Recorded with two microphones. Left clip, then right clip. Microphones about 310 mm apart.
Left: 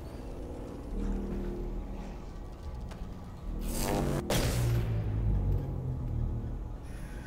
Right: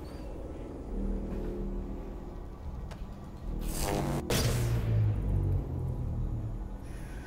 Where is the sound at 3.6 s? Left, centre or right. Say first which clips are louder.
Left 1 dB; centre.